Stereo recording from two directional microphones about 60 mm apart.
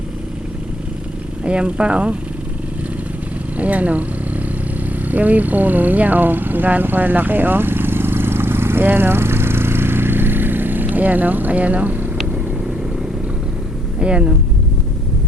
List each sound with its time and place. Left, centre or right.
1.5 s speech: centre
3.6 s speech: right
5.1 s vehicle: right
14.0 s speech: centre